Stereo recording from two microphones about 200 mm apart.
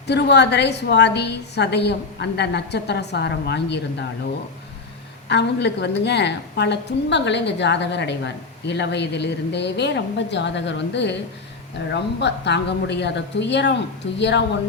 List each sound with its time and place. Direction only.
0.1 s a woman's voice: 55° left (ahead or behind)
5.3 s a woman's voice: 60° left (ahead or behind)